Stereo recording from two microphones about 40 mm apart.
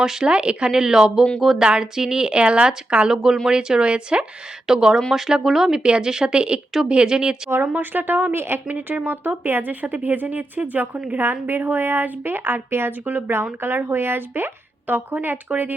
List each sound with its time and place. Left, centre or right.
0.0 s speech: centre
0.3 s speech: right
0.8 s speech: centre
1.6 s speech: right
3.8 s speech: right
4.6 s speech: centre
5.8 s speech: right
7.7 s speech: right
8.3 s a woman's voice: right
8.6 s speech: right
11.2 s speech: right
13.1 s speech: right
13.6 s speech: right